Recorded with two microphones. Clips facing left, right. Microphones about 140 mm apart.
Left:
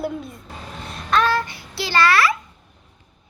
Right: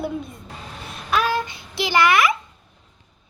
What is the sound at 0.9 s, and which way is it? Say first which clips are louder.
Child singing: left 2 dB; 10° right (ahead or behind).